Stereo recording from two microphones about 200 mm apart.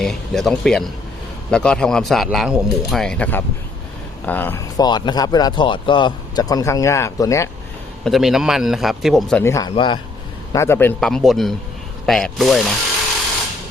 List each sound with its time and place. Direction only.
0.0 s a man's voice: centre (ahead or behind)
8.0 s speech: centre (ahead or behind)
9.4 s a man's voice: 15° left (ahead or behind)
10.5 s speech: 15° left (ahead or behind)